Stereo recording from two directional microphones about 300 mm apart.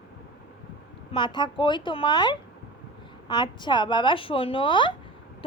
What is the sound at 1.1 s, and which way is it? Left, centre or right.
A woman's voice, centre.